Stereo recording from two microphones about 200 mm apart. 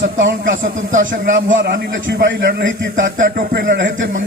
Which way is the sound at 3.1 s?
45° right (ahead or behind).